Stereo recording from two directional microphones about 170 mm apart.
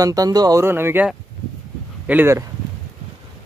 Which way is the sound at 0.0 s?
20° right (ahead or behind).